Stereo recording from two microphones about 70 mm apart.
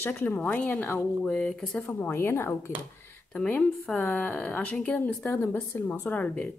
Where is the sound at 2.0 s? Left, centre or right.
Left.